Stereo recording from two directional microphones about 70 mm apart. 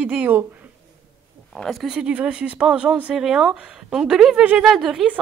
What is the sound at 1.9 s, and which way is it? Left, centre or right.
Speech, centre.